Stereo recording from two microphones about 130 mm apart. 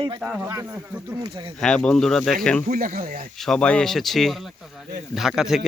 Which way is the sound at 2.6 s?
90° right.